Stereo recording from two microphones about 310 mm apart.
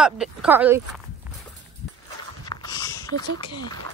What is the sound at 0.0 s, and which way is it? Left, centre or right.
Speech, centre.